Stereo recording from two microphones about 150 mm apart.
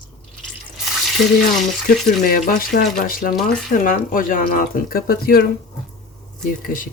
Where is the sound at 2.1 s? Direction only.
60° left (ahead or behind); by 5.5 s 90° left.